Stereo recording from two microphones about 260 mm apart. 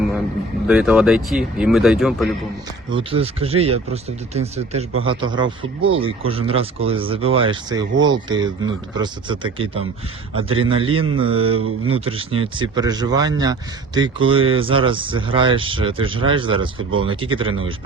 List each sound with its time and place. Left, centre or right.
0.7 s speech: centre
2.9 s speech: right